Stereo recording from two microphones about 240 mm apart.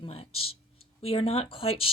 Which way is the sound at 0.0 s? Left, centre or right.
Left.